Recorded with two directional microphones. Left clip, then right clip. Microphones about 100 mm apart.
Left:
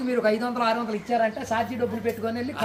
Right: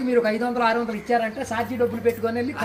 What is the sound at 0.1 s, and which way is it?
A woman's voice, 30° left (ahead or behind).